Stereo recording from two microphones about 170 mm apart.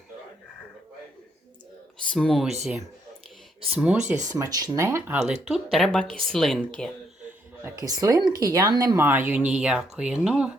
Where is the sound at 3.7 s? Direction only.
5° right (ahead or behind).